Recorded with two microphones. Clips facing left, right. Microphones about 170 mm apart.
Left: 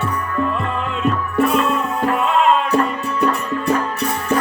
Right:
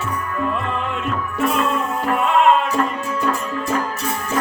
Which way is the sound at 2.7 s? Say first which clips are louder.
Left 3 dB; 65° left (ahead or behind).